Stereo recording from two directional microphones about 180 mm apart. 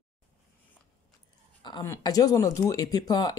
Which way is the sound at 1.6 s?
25° left (ahead or behind).